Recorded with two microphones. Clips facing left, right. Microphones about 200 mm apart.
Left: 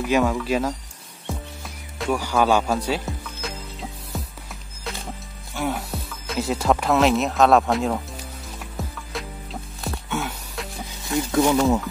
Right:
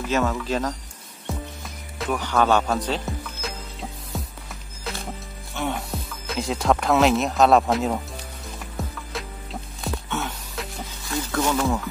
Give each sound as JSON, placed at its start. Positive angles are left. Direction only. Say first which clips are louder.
{"t": 0.0, "sound": "speech", "louder": "left 3 dB", "side_deg": 10}
{"t": 2.1, "sound": "speech", "louder": "even", "side_deg": 10}
{"t": 4.1, "sound": "music", "louder": "right 1 dB", "side_deg": 0}
{"t": 5.5, "sound": "speech", "louder": "left 1 dB", "side_deg": 5}
{"t": 8.7, "sound": "music", "louder": "even", "side_deg": 0}
{"t": 11.1, "sound": "a sound", "louder": "left 5 dB", "side_deg": 20}
{"t": 11.5, "sound": "speech", "louder": "left 4 dB", "side_deg": 15}